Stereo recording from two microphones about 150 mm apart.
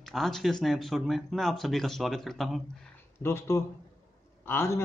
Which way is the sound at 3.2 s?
20° left (ahead or behind).